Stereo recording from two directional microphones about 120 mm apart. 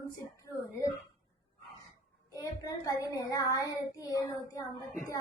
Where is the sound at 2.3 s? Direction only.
30° left (ahead or behind).